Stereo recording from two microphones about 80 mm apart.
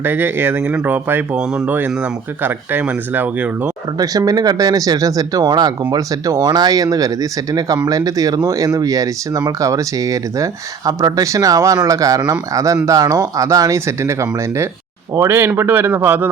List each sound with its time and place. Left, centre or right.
0.0 s speech: right
3.9 s speech: right